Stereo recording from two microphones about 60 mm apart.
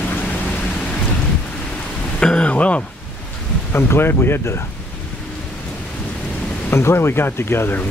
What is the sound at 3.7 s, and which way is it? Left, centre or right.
Speech, left.